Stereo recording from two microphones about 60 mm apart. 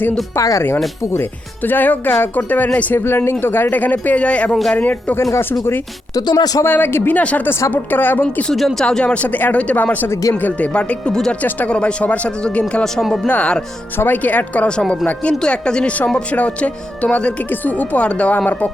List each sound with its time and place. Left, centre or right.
0.3 s speech: left
1.1 s speech: left
2.9 s speech: left
6.1 s speech: left
6.7 s speech: left
7.2 s speech: left
7.7 s speech: left
8.8 s speech: centre
9.1 s speech: left
10.7 s speech: centre
12.8 s speech: centre
13.2 s speech: left
17.5 s speech: left